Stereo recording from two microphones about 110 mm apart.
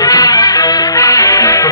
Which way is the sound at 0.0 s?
35° left (ahead or behind).